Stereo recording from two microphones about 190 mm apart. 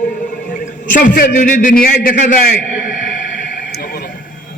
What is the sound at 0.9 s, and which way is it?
A man's voice, 45° left (ahead or behind).